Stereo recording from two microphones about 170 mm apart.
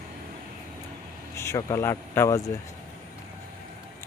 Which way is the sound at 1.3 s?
15° left (ahead or behind).